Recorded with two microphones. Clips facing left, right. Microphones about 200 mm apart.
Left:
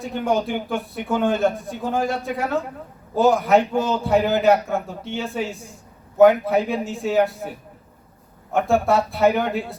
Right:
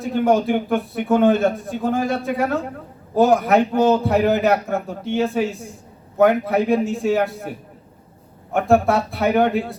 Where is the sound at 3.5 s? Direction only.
65° right (ahead or behind).